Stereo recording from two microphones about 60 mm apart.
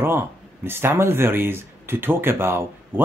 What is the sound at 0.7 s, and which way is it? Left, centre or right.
Speech, right.